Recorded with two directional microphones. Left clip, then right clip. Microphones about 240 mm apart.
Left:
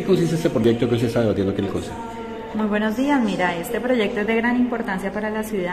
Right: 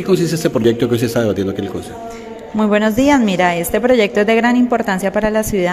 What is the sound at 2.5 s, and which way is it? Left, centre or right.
A woman's voice, right.